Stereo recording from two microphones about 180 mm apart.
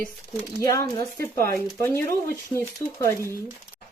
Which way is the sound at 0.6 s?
20° left (ahead or behind).